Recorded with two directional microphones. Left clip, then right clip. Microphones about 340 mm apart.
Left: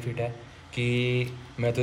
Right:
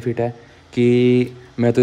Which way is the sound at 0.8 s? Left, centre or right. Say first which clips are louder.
Right 13 dB; right.